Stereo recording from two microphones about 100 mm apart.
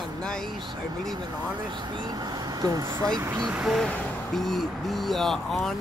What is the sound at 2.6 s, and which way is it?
Speech, 40° right (ahead or behind).